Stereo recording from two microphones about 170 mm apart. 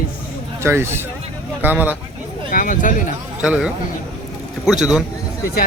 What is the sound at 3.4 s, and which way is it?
Speech, 5° right (ahead or behind).